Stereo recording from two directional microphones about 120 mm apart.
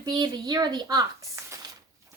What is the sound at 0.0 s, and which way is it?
Speech, 35° right (ahead or behind).